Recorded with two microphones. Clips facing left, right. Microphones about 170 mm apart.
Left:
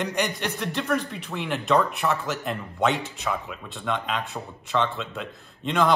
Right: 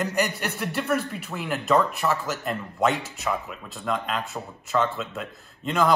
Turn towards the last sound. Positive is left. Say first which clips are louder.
# even
turn(degrees=0)  # may be behind; listen again after turning